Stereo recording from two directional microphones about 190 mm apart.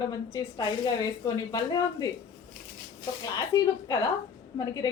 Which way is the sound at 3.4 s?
20° left (ahead or behind).